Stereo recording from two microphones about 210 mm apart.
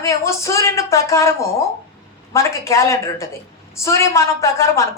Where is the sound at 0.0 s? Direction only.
15° left (ahead or behind).